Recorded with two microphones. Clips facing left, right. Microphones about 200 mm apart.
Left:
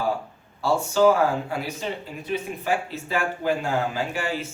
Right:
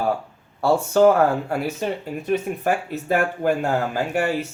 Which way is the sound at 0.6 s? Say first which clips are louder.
Right 3 dB; 55° right (ahead or behind).